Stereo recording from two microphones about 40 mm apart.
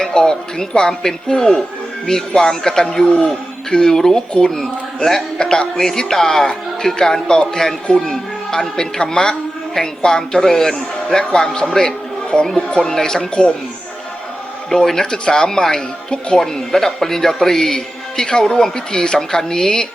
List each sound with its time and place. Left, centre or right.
0.0 s a man's voice: centre
14.7 s a man's voice: centre